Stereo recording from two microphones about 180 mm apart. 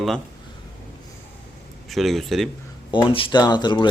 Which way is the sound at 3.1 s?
30° left (ahead or behind).